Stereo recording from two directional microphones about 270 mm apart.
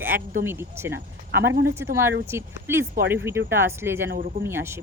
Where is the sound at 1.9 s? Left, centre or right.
Centre.